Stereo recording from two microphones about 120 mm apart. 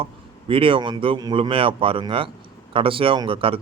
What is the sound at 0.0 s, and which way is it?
Speech, 50° right (ahead or behind).